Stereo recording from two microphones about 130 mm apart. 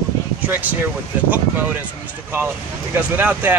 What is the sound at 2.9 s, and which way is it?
Speech, 15° right (ahead or behind).